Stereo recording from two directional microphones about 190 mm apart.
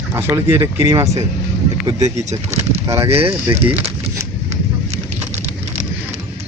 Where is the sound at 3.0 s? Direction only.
30° right (ahead or behind).